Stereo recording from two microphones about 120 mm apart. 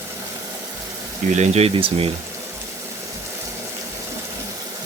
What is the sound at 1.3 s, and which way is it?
Speech, 65° right (ahead or behind).